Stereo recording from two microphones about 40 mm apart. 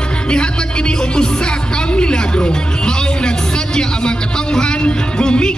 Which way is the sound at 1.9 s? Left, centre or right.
Left.